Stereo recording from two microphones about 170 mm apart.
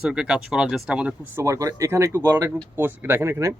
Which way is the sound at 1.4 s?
20° right (ahead or behind).